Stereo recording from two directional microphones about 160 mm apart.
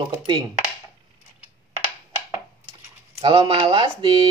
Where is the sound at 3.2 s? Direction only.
35° right (ahead or behind).